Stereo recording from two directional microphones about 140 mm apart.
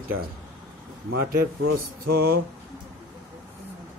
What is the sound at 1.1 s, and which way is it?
Speech, 90° right.